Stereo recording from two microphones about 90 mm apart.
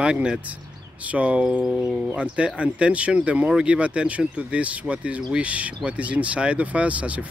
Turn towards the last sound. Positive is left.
turn(degrees=-15)  # may be behind; listen again after turning